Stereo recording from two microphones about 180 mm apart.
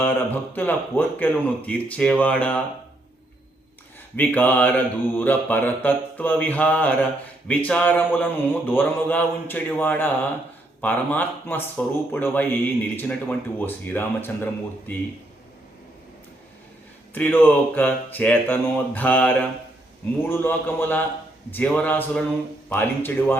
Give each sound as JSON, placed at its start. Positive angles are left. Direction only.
{"t": 0.0, "sound": "mantra", "side_deg": 10}
{"t": 4.2, "sound": "mantra", "side_deg": 10}
{"t": 17.2, "sound": "mantra", "side_deg": 10}